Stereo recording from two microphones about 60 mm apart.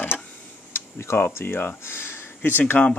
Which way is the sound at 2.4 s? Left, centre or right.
Left.